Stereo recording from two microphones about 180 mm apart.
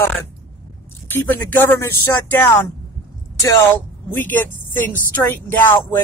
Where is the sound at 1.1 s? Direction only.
10° left (ahead or behind).